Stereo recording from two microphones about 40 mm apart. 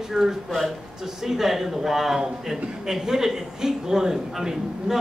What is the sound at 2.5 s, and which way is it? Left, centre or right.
A man's voice, centre.